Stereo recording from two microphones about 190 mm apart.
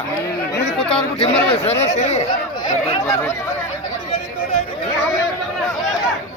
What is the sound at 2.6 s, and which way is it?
Speech, 20° left (ahead or behind).